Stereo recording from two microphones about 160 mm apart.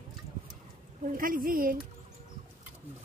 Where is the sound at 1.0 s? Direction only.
60° right (ahead or behind).